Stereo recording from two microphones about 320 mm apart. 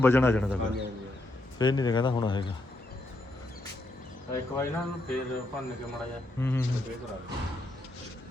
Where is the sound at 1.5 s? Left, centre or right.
Centre.